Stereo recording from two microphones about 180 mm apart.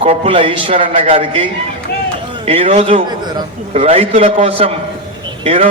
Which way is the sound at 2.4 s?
35° right (ahead or behind).